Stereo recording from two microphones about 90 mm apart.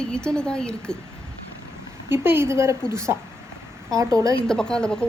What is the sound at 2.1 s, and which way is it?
A woman's voice, 25° right (ahead or behind).